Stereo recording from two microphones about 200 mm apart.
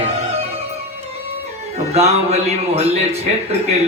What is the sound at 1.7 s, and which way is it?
Speech, 35° right (ahead or behind).